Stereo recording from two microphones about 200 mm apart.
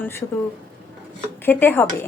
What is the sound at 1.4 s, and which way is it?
Speech, 10° left (ahead or behind).